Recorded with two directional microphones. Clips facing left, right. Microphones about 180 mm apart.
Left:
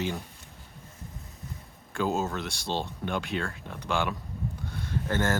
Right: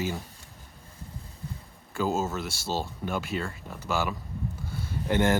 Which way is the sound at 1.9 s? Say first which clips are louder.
Right 1 dB; centre (ahead or behind).